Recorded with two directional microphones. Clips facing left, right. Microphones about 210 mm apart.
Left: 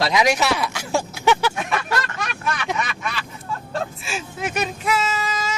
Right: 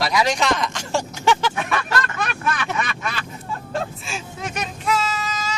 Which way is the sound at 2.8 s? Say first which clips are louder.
Right 1 dB; 45° right (ahead or behind).